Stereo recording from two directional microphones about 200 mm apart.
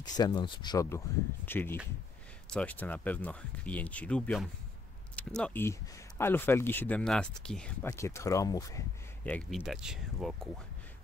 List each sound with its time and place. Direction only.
0.2 s speech: 20° left (ahead or behind)
9.6 s speech: 5° right (ahead or behind)